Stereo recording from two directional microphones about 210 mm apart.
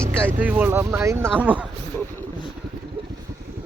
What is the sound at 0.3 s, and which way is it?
Speech, 10° right (ahead or behind).